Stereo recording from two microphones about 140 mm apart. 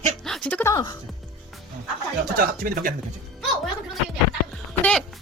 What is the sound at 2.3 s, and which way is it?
Speech, 90° right.